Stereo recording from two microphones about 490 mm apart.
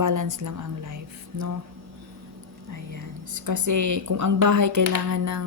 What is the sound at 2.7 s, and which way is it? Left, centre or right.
Speech, right.